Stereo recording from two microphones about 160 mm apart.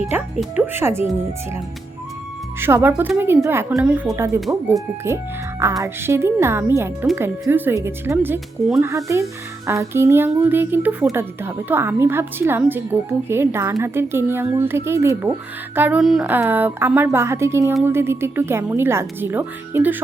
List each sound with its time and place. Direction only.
0.3 s a woman's voice: 10° right (ahead or behind)
2.6 s a woman's voice: 15° right (ahead or behind)
4.4 s speech: centre (ahead or behind)
5.0 s a woman's voice: 15° right (ahead or behind)